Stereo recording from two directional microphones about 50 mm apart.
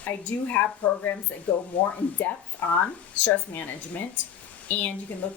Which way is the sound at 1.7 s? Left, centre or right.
Left.